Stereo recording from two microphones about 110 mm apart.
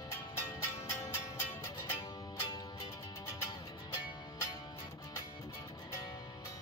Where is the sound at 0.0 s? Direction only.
35° left (ahead or behind).